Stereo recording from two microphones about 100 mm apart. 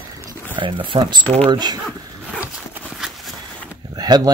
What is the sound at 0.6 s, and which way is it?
Speech, 60° right (ahead or behind).